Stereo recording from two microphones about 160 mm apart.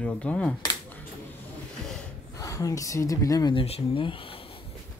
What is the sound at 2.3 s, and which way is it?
Speech, 20° left (ahead or behind).